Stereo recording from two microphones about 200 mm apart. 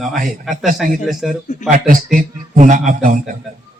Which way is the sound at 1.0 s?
Centre (ahead or behind).